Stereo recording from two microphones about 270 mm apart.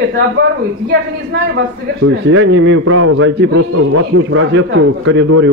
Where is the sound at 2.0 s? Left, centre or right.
Right.